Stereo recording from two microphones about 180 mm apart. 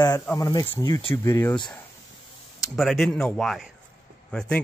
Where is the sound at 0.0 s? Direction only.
15° left (ahead or behind).